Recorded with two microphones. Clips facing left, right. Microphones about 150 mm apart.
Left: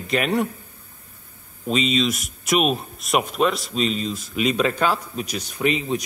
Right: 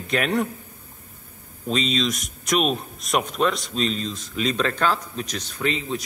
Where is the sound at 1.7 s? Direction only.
5° left (ahead or behind).